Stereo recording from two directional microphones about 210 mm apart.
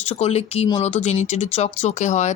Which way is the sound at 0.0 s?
30° left (ahead or behind).